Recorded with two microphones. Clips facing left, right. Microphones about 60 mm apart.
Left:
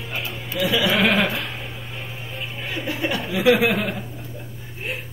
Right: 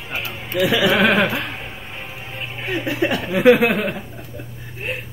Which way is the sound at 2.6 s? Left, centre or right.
Right.